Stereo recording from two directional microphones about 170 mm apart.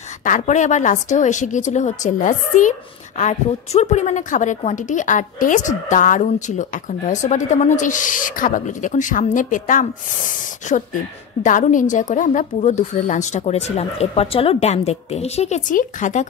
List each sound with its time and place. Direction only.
0.2 s a woman's voice: 45° left (ahead or behind)